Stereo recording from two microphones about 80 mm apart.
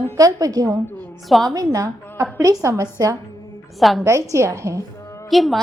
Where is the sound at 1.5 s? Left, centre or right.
Right.